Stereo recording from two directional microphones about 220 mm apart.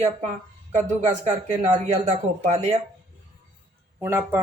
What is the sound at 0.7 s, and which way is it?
Speech, 30° right (ahead or behind).